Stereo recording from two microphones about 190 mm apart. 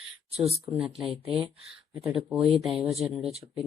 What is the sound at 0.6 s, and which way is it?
Speech, 5° right (ahead or behind).